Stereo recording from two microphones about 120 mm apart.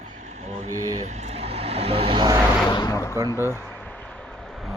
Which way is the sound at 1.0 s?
70° right (ahead or behind).